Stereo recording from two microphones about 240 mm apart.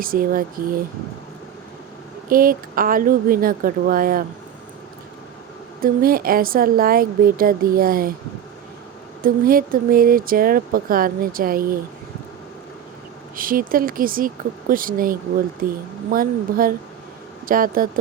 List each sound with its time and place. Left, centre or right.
0.0 s speech: right
2.3 s speech: right
5.8 s speech: right
9.2 s speech: right
13.3 s speech: right